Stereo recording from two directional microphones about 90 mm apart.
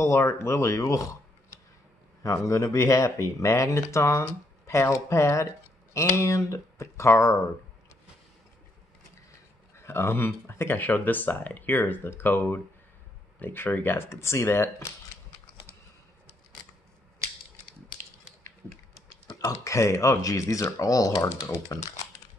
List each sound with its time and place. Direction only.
0.0 s speech: 35° left (ahead or behind)
2.2 s speech: 35° left (ahead or behind)
9.8 s speech: 30° left (ahead or behind)
19.4 s speech: 35° left (ahead or behind)
21.2 s speech: 30° left (ahead or behind)